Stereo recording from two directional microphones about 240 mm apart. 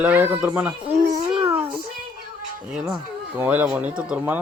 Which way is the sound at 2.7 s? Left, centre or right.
Centre.